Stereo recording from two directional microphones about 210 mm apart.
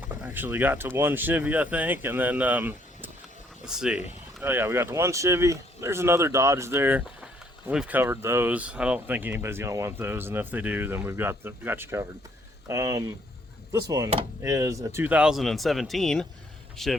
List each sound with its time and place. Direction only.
0.2 s speech: 10° right (ahead or behind)